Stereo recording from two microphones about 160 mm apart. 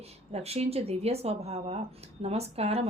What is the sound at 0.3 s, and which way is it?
A woman's voice, 40° right (ahead or behind).